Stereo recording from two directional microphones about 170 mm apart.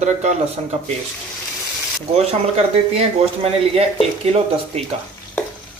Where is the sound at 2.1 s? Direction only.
35° right (ahead or behind).